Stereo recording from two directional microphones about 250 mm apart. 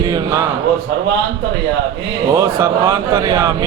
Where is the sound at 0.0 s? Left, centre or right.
Centre.